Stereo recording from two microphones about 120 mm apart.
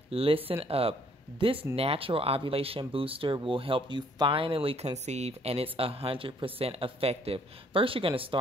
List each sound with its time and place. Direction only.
0.1 s speech: 50° right (ahead or behind)